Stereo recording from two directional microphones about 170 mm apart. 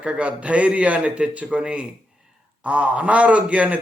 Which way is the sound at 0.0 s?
5° right (ahead or behind).